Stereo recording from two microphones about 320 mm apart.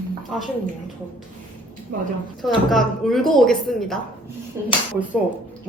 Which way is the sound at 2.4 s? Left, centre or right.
Centre.